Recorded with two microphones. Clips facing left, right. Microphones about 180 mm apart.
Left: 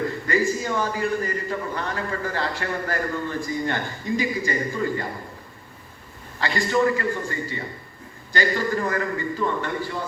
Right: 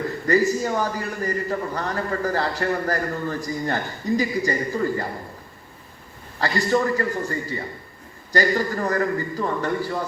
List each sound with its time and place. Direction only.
0.3 s a man's voice: 40° right (ahead or behind)
6.4 s a man's voice: 40° right (ahead or behind)